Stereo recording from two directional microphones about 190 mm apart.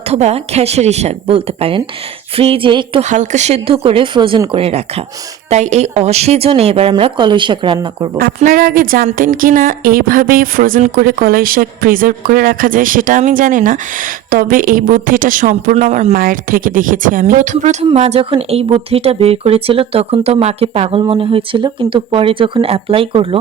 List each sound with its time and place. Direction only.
0.1 s a woman's voice: 35° right (ahead or behind)
3.1 s a woman's voice: 40° right (ahead or behind); by 8.2 s 20° right (ahead or behind)
8.4 s a woman's voice: 50° right (ahead or behind); by 23.4 s 30° right (ahead or behind)